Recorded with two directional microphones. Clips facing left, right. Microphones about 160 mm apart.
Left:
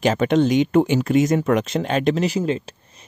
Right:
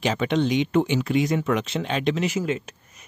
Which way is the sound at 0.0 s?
45° left (ahead or behind).